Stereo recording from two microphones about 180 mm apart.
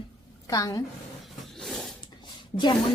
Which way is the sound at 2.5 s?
30° left (ahead or behind).